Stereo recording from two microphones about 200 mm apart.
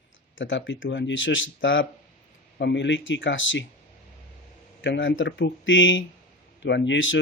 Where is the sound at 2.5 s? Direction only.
60° left (ahead or behind).